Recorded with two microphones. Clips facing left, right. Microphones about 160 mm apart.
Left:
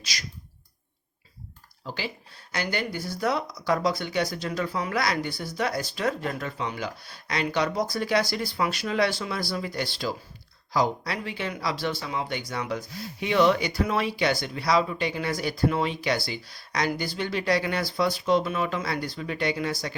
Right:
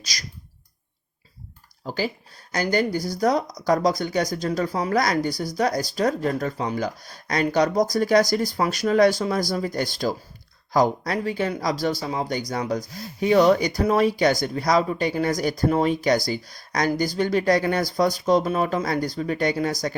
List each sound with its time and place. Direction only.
0.0 s clicking: 40° right (ahead or behind)
1.8 s speech: 40° right (ahead or behind)